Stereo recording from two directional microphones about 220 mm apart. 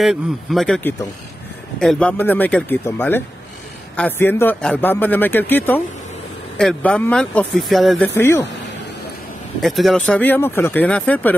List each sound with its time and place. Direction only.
0.0 s a man's voice: centre (ahead or behind)
8.1 s a man's voice: 10° left (ahead or behind)
9.6 s a man's voice: centre (ahead or behind)